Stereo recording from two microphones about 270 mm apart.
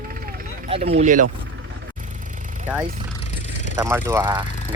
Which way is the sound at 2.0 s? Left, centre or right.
Right.